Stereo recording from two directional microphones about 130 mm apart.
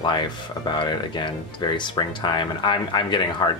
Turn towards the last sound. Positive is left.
turn(degrees=35)  # may be behind; listen again after turning